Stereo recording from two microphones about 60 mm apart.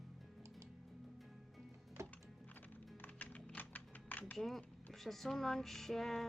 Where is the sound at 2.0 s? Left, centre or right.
Right.